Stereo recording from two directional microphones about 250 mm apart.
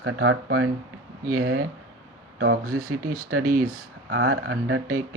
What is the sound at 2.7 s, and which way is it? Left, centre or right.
Speech, right.